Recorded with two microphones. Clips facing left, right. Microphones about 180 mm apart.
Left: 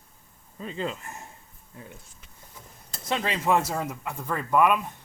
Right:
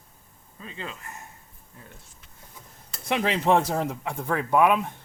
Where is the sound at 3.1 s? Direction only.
20° right (ahead or behind).